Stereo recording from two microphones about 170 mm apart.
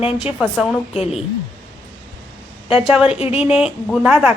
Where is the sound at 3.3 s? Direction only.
5° right (ahead or behind).